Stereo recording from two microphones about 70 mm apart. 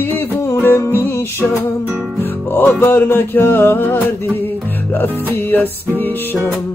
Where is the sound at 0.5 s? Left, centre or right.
Left.